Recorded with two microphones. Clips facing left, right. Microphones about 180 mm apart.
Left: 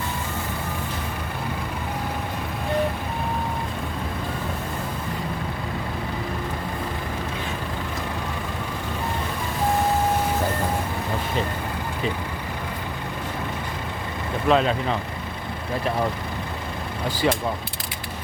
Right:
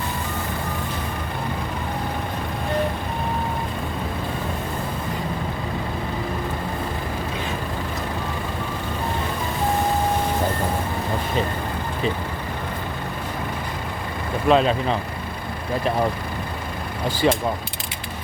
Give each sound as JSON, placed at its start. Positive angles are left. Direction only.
{"t": 14.4, "sound": "speech", "side_deg": -20}
{"t": 17.2, "sound": "speech", "side_deg": -25}